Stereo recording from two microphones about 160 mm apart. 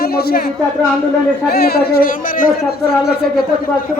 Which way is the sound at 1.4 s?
75° left (ahead or behind).